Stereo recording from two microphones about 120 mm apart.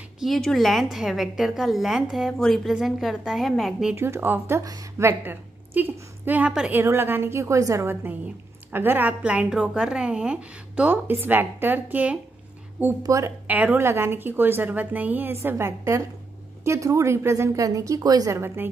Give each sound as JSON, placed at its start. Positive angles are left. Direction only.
{"t": 0.2, "sound": "a woman's voice", "side_deg": 5}
{"t": 3.9, "sound": "a woman's voice", "side_deg": -20}
{"t": 6.8, "sound": "a woman's voice", "side_deg": -20}
{"t": 13.0, "sound": "a woman's voice", "side_deg": -25}
{"t": 13.5, "sound": "a woman's voice", "side_deg": -15}